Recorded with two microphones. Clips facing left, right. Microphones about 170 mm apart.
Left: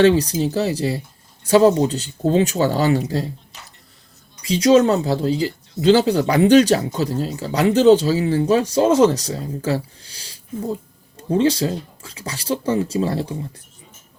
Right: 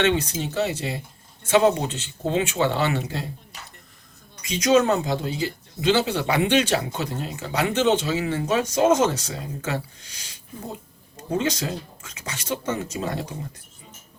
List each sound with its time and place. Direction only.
0.0 s speech: 35° left (ahead or behind)
4.4 s speech: 30° left (ahead or behind)